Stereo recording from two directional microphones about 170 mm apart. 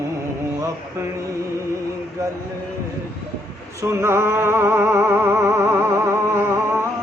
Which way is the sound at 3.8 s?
15° right (ahead or behind).